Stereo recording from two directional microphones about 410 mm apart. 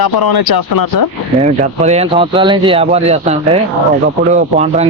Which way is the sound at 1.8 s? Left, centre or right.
Centre.